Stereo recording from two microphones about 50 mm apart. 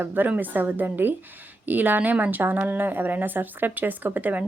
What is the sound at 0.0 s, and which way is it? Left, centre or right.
Speech, right.